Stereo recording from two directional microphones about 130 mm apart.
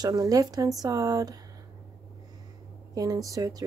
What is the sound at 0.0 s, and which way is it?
A woman's voice, 30° right (ahead or behind).